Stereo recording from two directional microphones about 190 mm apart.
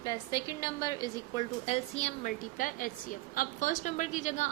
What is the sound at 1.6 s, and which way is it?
A woman's voice, 35° left (ahead or behind).